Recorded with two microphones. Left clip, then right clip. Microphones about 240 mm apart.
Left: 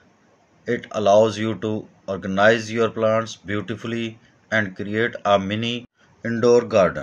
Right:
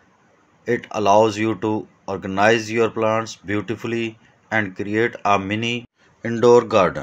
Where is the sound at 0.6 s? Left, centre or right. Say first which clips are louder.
Right 1 dB; centre.